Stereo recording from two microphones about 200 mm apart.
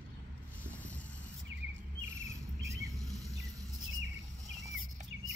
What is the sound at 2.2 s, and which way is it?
Cricket, 15° right (ahead or behind).